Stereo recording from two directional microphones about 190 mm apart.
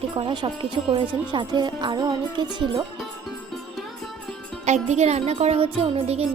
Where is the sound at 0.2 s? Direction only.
25° right (ahead or behind).